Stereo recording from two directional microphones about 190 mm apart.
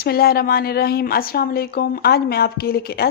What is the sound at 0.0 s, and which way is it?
A woman's voice, 55° left (ahead or behind).